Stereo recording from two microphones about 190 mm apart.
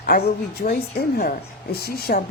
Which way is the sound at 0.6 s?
50° left (ahead or behind).